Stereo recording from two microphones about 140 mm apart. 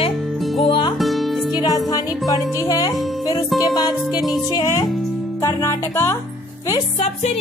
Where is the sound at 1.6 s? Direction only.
30° left (ahead or behind).